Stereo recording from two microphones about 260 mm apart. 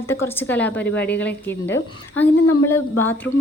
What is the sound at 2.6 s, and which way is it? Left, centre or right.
Speech, centre.